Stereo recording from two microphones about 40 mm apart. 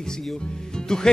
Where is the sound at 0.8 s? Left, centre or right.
Centre.